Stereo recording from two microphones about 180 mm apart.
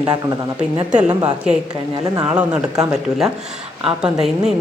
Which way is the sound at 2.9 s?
Centre (ahead or behind).